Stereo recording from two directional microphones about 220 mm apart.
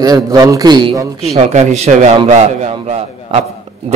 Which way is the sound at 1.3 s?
30° right (ahead or behind).